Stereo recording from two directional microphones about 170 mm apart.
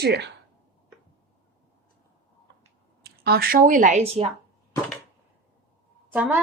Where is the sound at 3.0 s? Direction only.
70° right (ahead or behind); by 4.2 s 35° right (ahead or behind).